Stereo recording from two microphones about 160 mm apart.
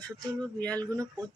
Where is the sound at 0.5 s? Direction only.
10° left (ahead or behind).